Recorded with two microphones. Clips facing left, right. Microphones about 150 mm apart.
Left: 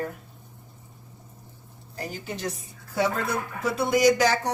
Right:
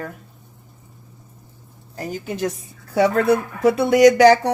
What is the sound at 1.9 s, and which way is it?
Speech, 50° right (ahead or behind).